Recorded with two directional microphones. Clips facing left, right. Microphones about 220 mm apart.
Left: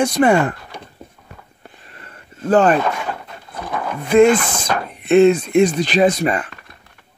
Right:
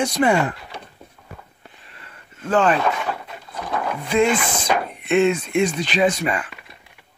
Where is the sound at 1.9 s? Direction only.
40° left (ahead or behind).